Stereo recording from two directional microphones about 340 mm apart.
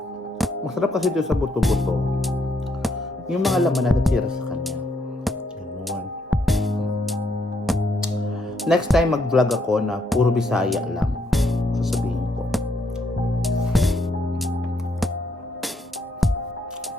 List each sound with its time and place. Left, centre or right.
0.3 s speech: centre
5.9 s music: centre
8.6 s speech: centre
13.4 s music: centre